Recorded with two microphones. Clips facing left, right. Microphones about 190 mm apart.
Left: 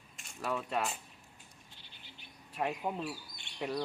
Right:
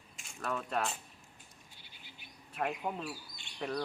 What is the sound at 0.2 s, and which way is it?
Speech, 5° left (ahead or behind).